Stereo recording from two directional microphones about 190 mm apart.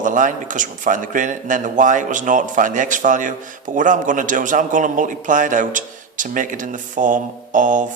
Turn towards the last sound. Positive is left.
turn(degrees=-40)  # may be behind; listen again after turning